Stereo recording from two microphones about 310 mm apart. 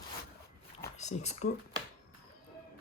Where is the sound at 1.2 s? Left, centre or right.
Left.